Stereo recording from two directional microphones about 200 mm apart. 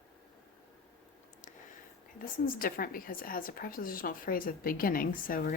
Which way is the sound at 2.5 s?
45° left (ahead or behind).